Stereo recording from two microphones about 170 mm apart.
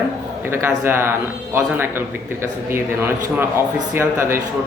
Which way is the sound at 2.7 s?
15° right (ahead or behind).